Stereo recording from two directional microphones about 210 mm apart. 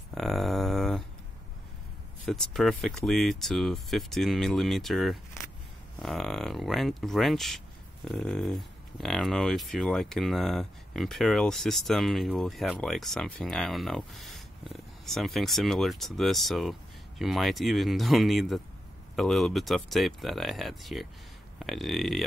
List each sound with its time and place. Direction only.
0.1 s mantra: centre (ahead or behind)
2.2 s speech: centre (ahead or behind)